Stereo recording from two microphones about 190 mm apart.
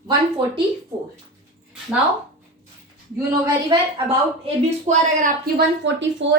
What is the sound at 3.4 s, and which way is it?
Speech, 25° right (ahead or behind).